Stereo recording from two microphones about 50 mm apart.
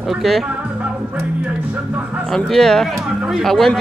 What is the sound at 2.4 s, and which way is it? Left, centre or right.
Speech, centre.